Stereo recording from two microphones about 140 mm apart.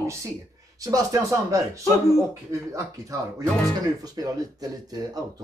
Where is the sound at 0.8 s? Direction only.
25° right (ahead or behind).